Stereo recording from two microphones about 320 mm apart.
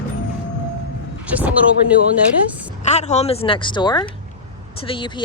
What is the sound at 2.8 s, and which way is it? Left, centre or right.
Speech, left.